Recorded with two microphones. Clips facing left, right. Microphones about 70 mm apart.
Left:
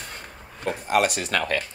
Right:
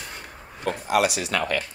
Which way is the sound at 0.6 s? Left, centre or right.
Left.